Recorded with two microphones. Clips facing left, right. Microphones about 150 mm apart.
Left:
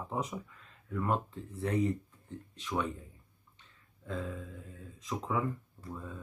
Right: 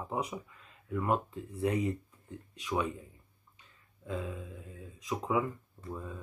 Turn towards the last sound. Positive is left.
turn(degrees=-5)  # may be behind; listen again after turning